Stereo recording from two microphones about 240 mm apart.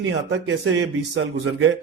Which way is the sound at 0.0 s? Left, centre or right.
Right.